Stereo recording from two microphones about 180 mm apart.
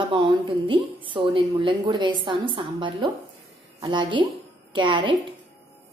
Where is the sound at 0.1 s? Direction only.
30° right (ahead or behind).